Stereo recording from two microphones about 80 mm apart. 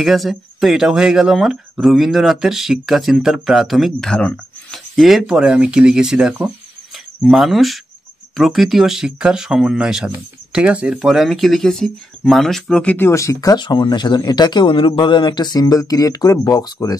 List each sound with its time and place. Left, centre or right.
0.0 s speech: centre
11.0 s speech: centre
13.1 s speech: left
13.6 s speech: left